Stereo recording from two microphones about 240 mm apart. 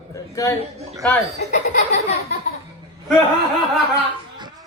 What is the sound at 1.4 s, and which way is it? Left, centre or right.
Laughter, left.